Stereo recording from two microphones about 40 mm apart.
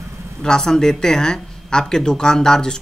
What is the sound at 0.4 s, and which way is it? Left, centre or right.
Speech, centre.